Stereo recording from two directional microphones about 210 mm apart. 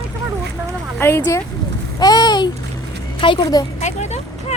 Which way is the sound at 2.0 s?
20° left (ahead or behind).